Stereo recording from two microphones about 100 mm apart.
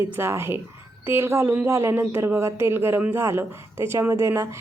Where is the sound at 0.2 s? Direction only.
25° right (ahead or behind).